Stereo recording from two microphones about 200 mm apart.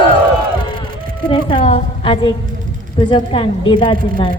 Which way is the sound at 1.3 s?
25° left (ahead or behind).